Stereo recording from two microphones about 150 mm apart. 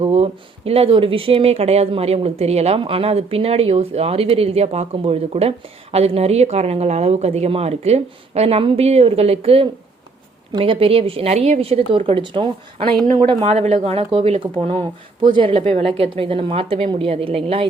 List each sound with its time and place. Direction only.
0.0 s a woman's voice: 40° right (ahead or behind)
13.4 s a woman's voice: 45° right (ahead or behind)